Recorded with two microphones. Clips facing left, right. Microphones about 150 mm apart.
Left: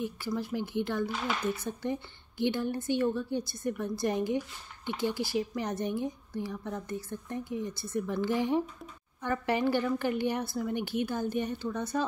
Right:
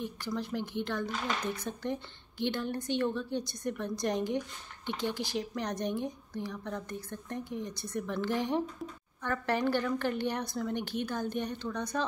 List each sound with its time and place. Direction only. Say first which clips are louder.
0.0 s a woman's voice: left 2 dB; 10° left (ahead or behind)